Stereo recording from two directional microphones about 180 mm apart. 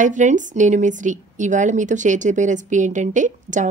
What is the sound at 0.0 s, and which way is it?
A woman's voice, 45° right (ahead or behind).